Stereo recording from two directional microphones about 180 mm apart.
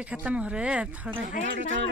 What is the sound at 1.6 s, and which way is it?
Speech, 90° right.